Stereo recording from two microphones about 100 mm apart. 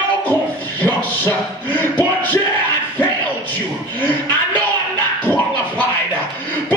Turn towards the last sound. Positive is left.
turn(degrees=15)  # may be behind; listen again after turning